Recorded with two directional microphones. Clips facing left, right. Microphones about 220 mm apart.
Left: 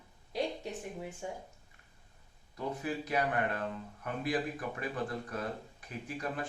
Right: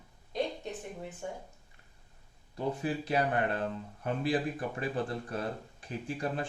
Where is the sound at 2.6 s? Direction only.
30° right (ahead or behind).